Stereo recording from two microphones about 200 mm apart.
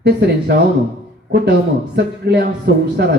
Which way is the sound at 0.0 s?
55° right (ahead or behind).